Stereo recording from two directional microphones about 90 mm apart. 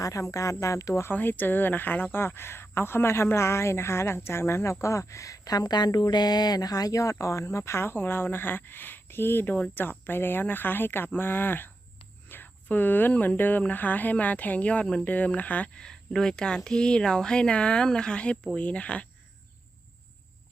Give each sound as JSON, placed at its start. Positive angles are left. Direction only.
{"t": 0.0, "sound": "speech", "side_deg": 35}
{"t": 1.1, "sound": "a woman's voice", "side_deg": 20}